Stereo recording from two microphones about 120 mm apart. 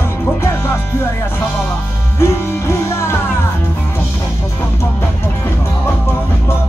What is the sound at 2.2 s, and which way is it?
Music, 20° left (ahead or behind).